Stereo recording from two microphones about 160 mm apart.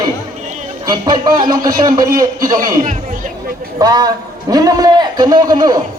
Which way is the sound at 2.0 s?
60° right (ahead or behind).